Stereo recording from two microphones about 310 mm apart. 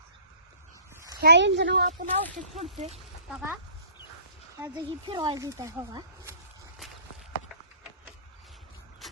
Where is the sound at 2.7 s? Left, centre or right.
Centre.